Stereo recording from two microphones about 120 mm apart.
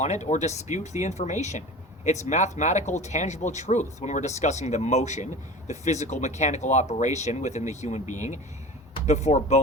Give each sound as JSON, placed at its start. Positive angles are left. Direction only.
{"t": 0.0, "sound": "speech", "side_deg": 75}
{"t": 9.0, "sound": "speech", "side_deg": 70}